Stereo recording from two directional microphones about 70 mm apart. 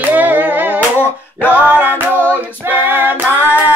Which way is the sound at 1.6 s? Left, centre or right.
Right.